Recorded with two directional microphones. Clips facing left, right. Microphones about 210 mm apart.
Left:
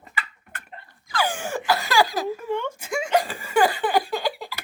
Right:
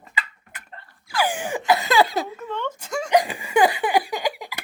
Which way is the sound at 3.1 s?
15° right (ahead or behind).